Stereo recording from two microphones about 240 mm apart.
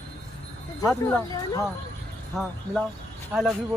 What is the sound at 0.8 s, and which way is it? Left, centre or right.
Speech, centre.